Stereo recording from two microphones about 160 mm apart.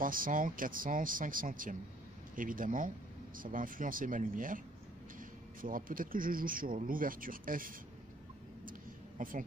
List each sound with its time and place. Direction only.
0.0 s speech: 60° right (ahead or behind)
5.6 s speech: 60° right (ahead or behind)
9.2 s speech: 60° right (ahead or behind)